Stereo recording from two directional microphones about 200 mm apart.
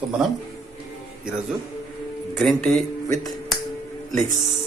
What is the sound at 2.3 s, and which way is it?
Speech, centre (ahead or behind).